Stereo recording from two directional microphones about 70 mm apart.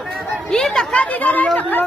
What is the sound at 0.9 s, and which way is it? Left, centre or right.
Speech, left.